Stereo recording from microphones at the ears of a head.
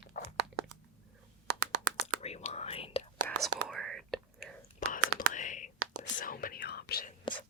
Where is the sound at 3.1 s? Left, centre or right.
Right.